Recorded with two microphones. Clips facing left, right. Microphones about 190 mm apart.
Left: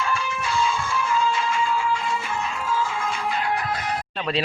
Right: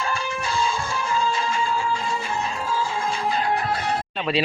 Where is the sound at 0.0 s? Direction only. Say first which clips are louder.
Even; 35° right (ahead or behind).